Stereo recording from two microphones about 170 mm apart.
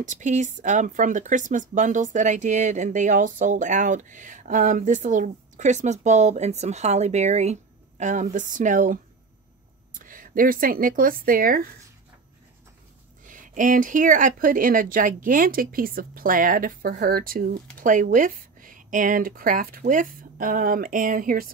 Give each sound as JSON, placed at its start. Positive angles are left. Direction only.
{"t": 0.0, "sound": "speech", "side_deg": -45}
{"t": 13.2, "sound": "speech", "side_deg": -50}